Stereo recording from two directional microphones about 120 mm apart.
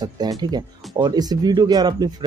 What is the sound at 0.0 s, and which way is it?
Speech, 35° right (ahead or behind).